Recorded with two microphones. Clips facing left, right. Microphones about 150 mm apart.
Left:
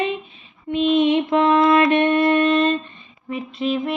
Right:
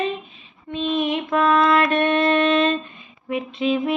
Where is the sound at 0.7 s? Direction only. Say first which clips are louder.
Left 6 dB; 25° left (ahead or behind).